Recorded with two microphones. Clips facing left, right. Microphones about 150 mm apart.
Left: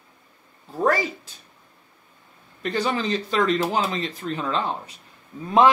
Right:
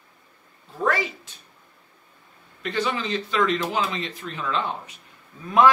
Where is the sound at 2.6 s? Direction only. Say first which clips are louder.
Left 2 dB; 40° left (ahead or behind).